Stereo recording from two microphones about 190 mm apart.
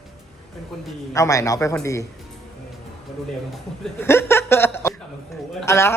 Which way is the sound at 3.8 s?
10° left (ahead or behind).